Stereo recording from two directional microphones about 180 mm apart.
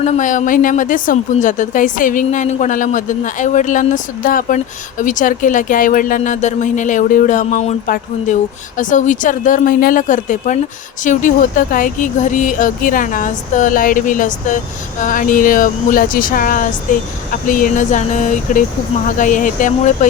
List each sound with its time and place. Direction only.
0.0 s a woman's voice: 40° left (ahead or behind)